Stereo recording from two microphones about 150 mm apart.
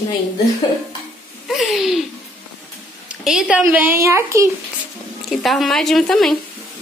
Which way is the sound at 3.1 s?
5° right (ahead or behind).